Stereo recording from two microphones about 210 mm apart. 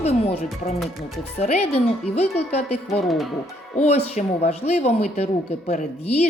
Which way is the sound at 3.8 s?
30° left (ahead or behind).